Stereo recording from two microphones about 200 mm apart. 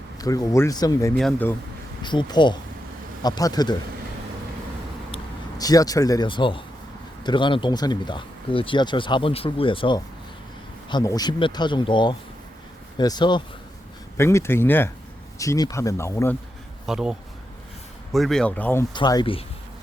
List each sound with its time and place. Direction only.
0.2 s speech: 20° left (ahead or behind)
1.1 s speech: 5° left (ahead or behind)
2.0 s speech: 20° left (ahead or behind)
5.1 s speech: 20° left (ahead or behind)
16.8 s speech: 5° right (ahead or behind)
18.9 s speech: 20° left (ahead or behind)